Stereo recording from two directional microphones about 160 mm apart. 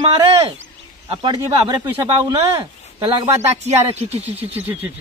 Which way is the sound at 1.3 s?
25° right (ahead or behind).